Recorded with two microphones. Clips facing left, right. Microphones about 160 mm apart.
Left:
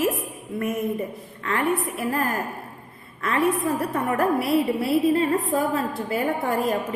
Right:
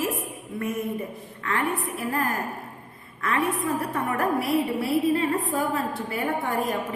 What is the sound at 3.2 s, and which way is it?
Speech, 30° left (ahead or behind).